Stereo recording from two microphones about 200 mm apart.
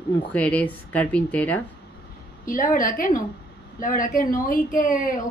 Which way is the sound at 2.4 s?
40° left (ahead or behind).